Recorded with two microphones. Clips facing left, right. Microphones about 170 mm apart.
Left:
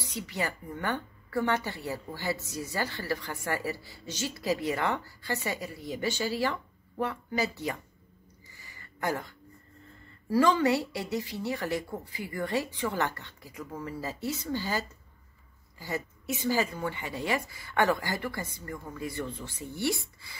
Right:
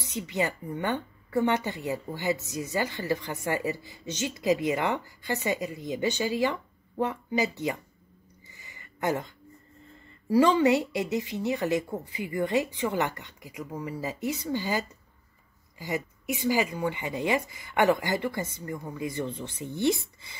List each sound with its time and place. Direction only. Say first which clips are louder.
0.0 s speech: right 4 dB; 20° right (ahead or behind)
8.5 s a sound: right 1 dB; 20° right (ahead or behind)
10.3 s speech: right 3 dB; 20° right (ahead or behind)